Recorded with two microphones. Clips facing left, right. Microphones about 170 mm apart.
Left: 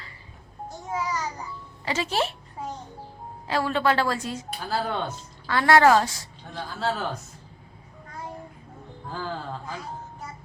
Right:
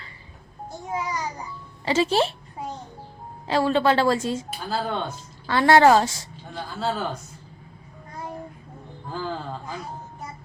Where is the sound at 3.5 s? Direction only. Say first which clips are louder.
Right 4 dB; 25° right (ahead or behind).